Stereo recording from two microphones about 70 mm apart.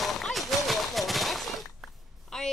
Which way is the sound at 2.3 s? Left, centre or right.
Centre.